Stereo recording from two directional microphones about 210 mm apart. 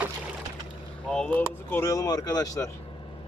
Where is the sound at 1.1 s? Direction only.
5° left (ahead or behind).